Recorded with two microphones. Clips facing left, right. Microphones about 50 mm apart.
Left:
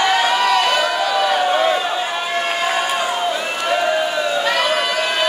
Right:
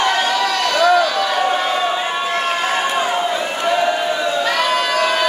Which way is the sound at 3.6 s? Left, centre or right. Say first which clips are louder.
Right 2 dB; centre.